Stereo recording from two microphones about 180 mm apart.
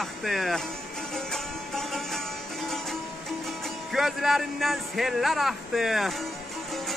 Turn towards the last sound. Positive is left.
turn(degrees=0)  # may be behind; listen again after turning